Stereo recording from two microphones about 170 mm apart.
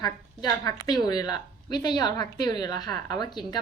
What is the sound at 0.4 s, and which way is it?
A woman's voice, 20° left (ahead or behind).